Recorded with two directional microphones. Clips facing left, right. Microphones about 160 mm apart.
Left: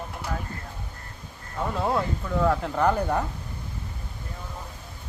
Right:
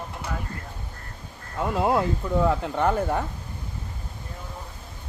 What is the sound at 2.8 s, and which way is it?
Speech, centre (ahead or behind).